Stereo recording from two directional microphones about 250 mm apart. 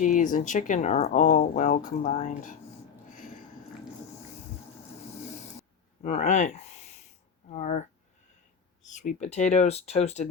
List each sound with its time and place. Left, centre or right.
0.0 s speech: left
6.0 s speech: left
8.9 s speech: left